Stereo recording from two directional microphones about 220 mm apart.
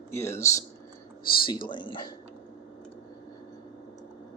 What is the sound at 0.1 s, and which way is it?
Speech, 10° left (ahead or behind).